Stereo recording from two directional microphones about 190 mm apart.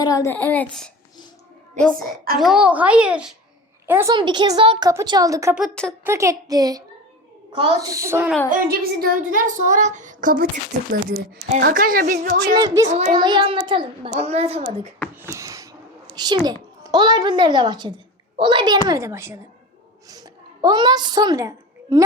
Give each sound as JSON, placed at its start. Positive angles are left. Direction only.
{"t": 0.0, "sound": "child singing", "side_deg": 15}
{"t": 2.4, "sound": "a child's voice", "side_deg": -5}
{"t": 4.1, "sound": "a child's voice", "side_deg": -25}
{"t": 5.5, "sound": "a child's voice", "side_deg": 0}
{"t": 6.1, "sound": "a child's voice", "side_deg": -15}
{"t": 8.4, "sound": "child singing", "side_deg": -50}
{"t": 11.6, "sound": "child singing", "side_deg": -55}
{"t": 12.5, "sound": "a child's voice", "side_deg": -20}
{"t": 15.1, "sound": "a sound", "side_deg": -15}
{"t": 16.1, "sound": "a woman's voice", "side_deg": -20}
{"t": 20.1, "sound": "a sound", "side_deg": -20}